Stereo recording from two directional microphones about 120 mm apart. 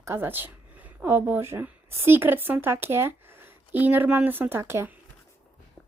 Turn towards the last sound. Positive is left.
turn(degrees=-20)  # may be behind; listen again after turning